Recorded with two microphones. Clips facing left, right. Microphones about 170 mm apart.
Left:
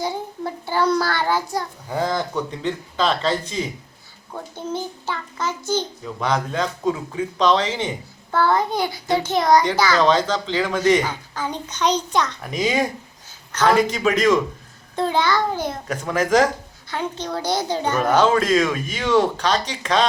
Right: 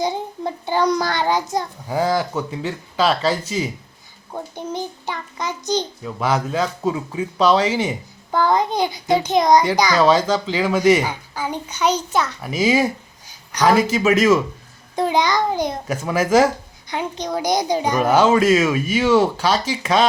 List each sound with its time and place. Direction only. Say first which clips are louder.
0.0 s a child's voice: right 3 dB; 20° right (ahead or behind)
1.9 s speech: right 3 dB; 5° right (ahead or behind)
6.1 s speech: right 2 dB; 5° right (ahead or behind)